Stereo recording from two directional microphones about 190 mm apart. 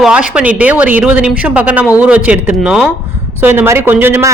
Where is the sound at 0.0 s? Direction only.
5° right (ahead or behind).